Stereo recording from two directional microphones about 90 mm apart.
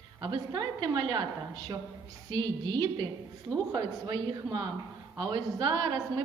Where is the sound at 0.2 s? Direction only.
55° right (ahead or behind).